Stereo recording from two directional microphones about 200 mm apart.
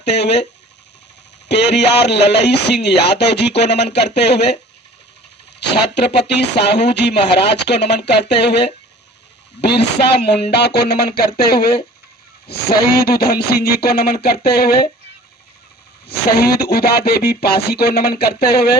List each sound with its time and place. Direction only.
0.0 s speech: 55° left (ahead or behind)
1.5 s speech: 60° left (ahead or behind)
5.5 s speech: 60° left (ahead or behind)
12.8 s speech: 50° left (ahead or behind)
16.0 s speech: 50° left (ahead or behind)